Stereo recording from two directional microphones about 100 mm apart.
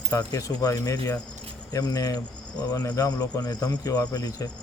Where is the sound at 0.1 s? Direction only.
35° left (ahead or behind).